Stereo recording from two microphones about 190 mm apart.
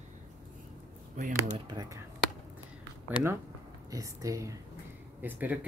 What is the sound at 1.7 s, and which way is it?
Speech, 20° right (ahead or behind).